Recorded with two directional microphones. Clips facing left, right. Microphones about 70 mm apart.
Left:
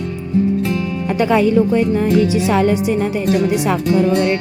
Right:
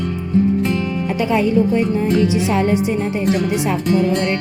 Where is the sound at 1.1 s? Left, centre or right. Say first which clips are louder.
Left 3 dB; left.